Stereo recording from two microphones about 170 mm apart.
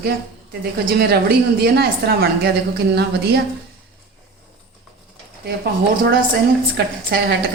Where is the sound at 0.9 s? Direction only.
70° right (ahead or behind).